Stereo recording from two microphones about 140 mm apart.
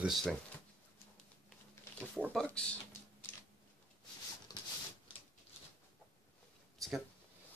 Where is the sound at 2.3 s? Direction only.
5° left (ahead or behind).